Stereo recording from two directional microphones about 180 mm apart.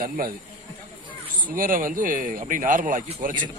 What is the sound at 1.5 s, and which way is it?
Speech, 50° right (ahead or behind).